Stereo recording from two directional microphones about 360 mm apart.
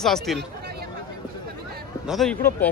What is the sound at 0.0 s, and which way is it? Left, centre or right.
Speech, centre.